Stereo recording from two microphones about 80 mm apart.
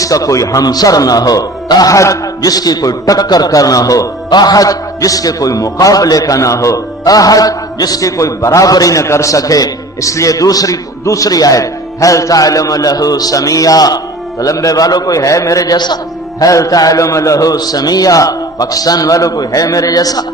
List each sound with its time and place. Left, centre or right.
0.0 s a man's voice: left
4.3 s a man's voice: left
16.4 s a man's voice: left